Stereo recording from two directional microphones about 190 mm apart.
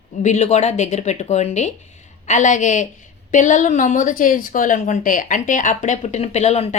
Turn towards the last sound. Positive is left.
turn(degrees=35)  # may be behind; listen again after turning